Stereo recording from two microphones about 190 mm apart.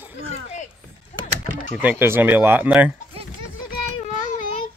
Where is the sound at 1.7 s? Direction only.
5° right (ahead or behind).